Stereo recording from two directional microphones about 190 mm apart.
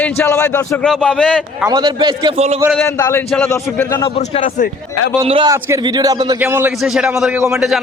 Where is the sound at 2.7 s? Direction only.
15° left (ahead or behind).